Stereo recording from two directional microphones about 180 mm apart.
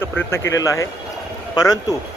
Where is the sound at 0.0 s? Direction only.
15° left (ahead or behind).